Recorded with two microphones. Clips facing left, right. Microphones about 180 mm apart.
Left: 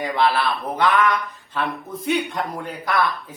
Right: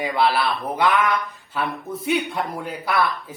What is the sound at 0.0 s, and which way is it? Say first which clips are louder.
Speech: even; 10° right (ahead or behind).